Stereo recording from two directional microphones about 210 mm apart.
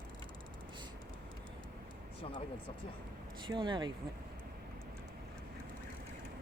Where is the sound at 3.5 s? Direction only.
20° right (ahead or behind).